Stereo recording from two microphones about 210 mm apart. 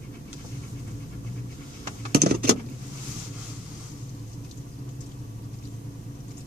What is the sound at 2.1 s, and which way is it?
Vehicle, 50° right (ahead or behind).